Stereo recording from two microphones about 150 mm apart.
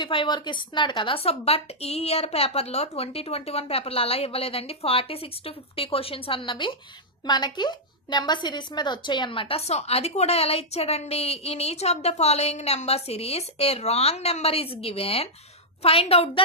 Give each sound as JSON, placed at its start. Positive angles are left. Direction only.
{"t": 0.0, "sound": "a woman's voice", "side_deg": 35}